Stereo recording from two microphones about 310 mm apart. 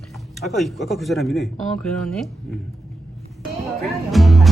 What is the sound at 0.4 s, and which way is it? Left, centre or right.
Speech, centre.